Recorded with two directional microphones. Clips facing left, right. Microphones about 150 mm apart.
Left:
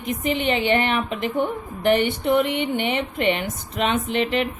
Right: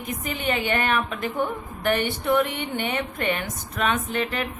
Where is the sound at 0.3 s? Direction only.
25° left (ahead or behind).